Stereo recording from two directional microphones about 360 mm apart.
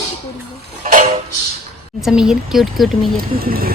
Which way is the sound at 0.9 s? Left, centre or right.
Right.